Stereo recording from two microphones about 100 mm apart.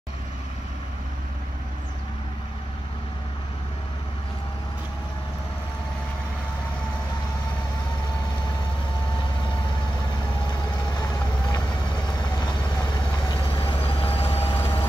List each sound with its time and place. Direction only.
12.4 s vehicle: 45° left (ahead or behind)
13.8 s vehicle: 70° left (ahead or behind)
14.6 s vehicle: 25° left (ahead or behind)